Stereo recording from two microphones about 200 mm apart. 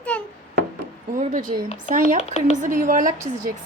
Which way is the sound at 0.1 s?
5° left (ahead or behind).